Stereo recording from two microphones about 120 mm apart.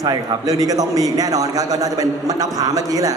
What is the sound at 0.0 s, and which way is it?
A man's voice, 30° right (ahead or behind).